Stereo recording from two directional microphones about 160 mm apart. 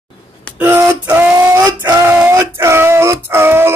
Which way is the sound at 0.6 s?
15° right (ahead or behind).